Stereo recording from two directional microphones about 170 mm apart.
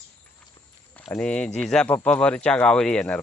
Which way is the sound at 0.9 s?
5° left (ahead or behind).